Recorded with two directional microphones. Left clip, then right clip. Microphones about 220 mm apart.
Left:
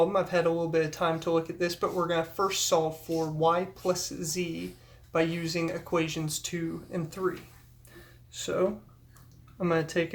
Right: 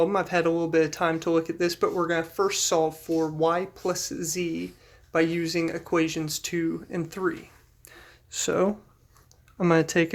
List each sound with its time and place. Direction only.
0.0 s speech: 40° right (ahead or behind)